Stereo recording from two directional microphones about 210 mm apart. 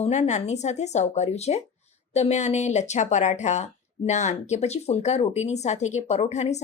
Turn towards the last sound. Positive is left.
turn(degrees=30)  # may be behind; listen again after turning